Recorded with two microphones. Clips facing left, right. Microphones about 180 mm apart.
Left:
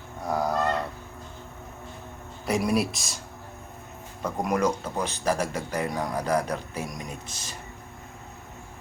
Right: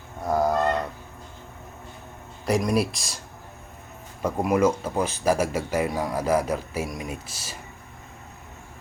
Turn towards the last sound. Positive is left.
turn(degrees=-5)  # may be behind; listen again after turning